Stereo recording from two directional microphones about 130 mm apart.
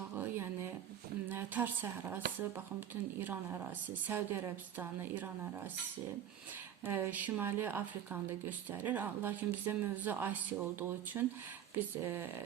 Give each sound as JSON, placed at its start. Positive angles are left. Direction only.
{"t": 1.3, "sound": "a woman's voice", "side_deg": -15}
{"t": 6.8, "sound": "speech", "side_deg": -15}